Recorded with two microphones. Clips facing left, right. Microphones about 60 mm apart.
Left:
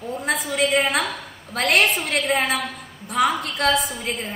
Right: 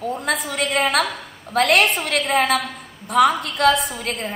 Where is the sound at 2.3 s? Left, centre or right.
Right.